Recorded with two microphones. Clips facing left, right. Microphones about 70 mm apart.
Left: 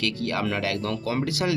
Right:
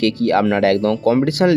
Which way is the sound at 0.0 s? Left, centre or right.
Right.